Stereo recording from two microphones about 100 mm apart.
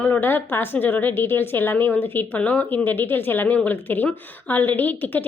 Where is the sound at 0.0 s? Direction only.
20° left (ahead or behind).